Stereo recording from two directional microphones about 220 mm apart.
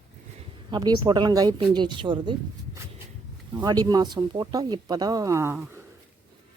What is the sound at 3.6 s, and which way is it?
Speech, 15° right (ahead or behind).